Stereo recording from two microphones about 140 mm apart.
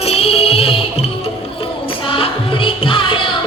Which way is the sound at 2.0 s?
40° left (ahead or behind).